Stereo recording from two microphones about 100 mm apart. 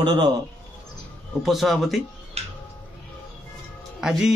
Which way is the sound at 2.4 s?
90° right.